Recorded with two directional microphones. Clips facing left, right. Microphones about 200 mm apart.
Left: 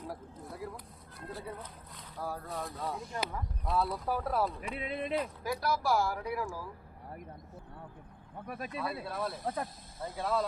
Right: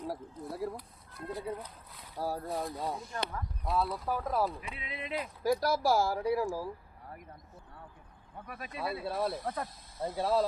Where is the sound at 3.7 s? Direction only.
Centre (ahead or behind).